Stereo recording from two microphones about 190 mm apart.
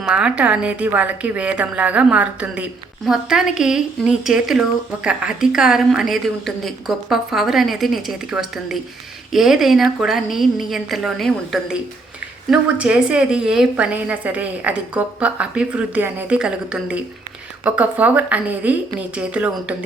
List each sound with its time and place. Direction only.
0.0 s a woman's voice: 5° right (ahead or behind)